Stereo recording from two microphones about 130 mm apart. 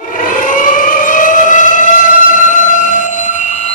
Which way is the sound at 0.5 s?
90° left.